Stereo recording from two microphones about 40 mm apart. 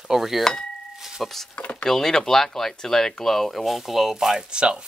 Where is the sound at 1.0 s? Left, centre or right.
Centre.